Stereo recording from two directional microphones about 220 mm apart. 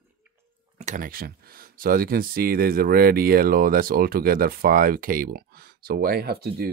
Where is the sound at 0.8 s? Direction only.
35° right (ahead or behind).